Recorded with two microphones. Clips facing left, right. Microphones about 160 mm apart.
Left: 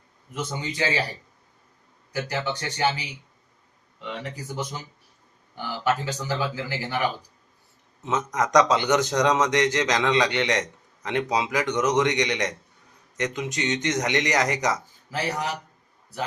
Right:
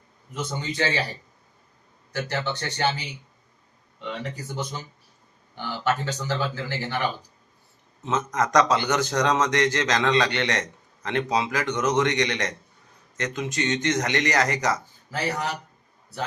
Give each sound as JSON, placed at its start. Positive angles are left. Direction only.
{"t": 0.3, "sound": "a man's voice", "side_deg": 10}
{"t": 2.1, "sound": "a man's voice", "side_deg": 10}
{"t": 4.5, "sound": "a man's voice", "side_deg": 5}